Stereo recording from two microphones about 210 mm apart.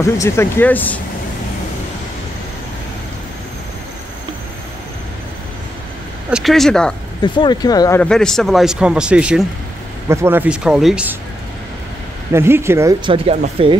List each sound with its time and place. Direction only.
0.0 s speech: 10° left (ahead or behind)
6.3 s speech: centre (ahead or behind)
7.2 s speech: 20° left (ahead or behind)
8.0 s speech: 5° left (ahead or behind)
12.3 s speech: 10° right (ahead or behind)
13.1 s speech: 25° right (ahead or behind)